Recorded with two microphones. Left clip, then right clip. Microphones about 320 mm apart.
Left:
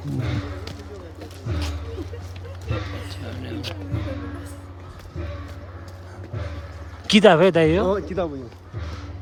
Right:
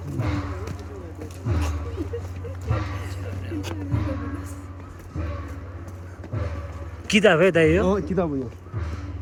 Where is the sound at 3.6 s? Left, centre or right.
Centre.